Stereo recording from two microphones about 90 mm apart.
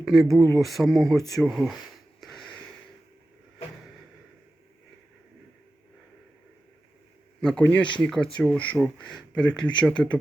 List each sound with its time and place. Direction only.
0.0 s speech: centre (ahead or behind)
2.2 s a sound: 5° left (ahead or behind)
7.6 s speech: 20° left (ahead or behind)